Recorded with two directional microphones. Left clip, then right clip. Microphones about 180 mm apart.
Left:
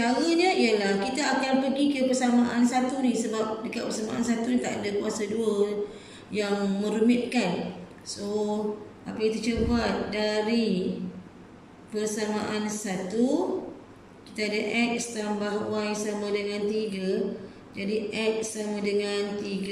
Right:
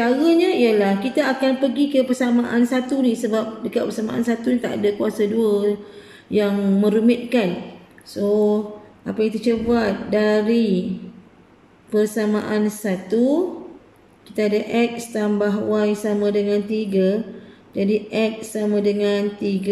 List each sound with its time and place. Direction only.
0.0 s a woman's voice: 50° right (ahead or behind)
11.9 s speech: 55° right (ahead or behind)
14.3 s speech: 55° right (ahead or behind)